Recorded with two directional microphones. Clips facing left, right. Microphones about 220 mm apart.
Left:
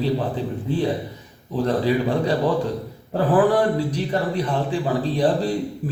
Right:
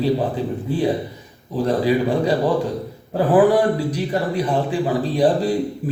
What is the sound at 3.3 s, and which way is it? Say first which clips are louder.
A man's voice: right 3 dB; 10° right (ahead or behind).